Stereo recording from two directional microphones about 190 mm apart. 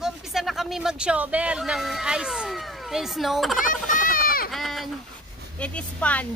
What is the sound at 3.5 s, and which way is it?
Vehicle, 45° left (ahead or behind).